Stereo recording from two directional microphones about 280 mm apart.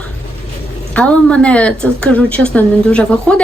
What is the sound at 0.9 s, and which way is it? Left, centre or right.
Speech, centre.